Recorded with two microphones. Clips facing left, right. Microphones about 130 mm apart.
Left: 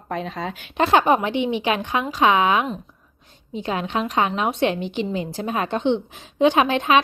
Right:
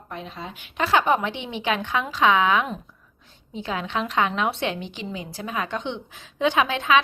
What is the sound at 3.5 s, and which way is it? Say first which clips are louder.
Speech: left 4 dB; 55° left (ahead or behind).